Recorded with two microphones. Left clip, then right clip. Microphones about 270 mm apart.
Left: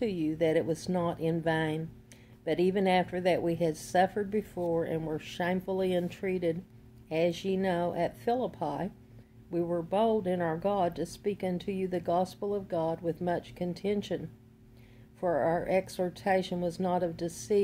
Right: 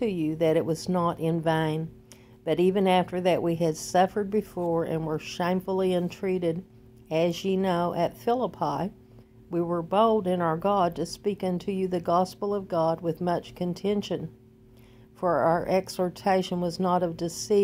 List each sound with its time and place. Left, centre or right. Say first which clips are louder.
0.0 s speech: right 4 dB; centre